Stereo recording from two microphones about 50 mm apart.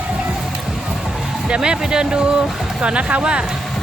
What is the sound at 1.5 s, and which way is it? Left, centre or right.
Speech, centre.